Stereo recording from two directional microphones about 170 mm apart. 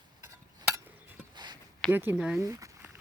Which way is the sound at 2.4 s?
15° right (ahead or behind).